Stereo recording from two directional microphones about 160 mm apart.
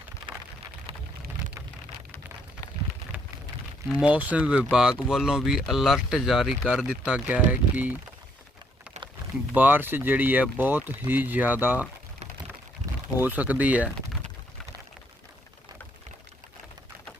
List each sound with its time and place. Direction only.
0.2 s rain: 30° right (ahead or behind)
3.8 s speech: 10° right (ahead or behind)
9.6 s speech: 10° right (ahead or behind)
13.2 s speech: 10° right (ahead or behind)